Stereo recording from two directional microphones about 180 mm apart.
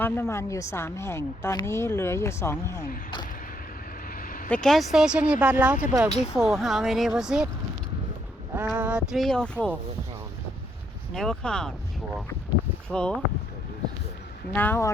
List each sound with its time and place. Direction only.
0.0 s a woman's voice: 15° left (ahead or behind)
4.0 s vehicle: 50° left (ahead or behind)
4.4 s speech: 5° left (ahead or behind)
8.5 s speech: 10° right (ahead or behind)
11.1 s speech: 5° left (ahead or behind)
12.9 s speech: 5° left (ahead or behind)
14.5 s a woman's voice: 10° left (ahead or behind)